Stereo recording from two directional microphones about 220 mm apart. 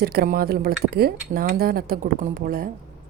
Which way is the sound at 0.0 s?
45° right (ahead or behind).